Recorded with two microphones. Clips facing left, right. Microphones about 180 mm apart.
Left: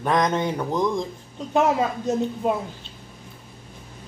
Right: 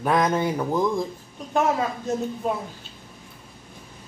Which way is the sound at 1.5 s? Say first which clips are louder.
Left 2 dB; 20° left (ahead or behind).